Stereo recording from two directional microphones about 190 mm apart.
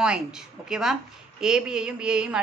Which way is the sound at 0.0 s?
5° right (ahead or behind).